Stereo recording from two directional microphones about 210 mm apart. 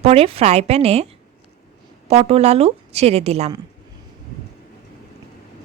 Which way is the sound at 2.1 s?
30° right (ahead or behind).